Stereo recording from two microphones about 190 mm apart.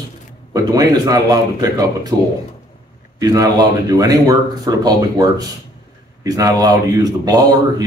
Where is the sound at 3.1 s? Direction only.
20° right (ahead or behind).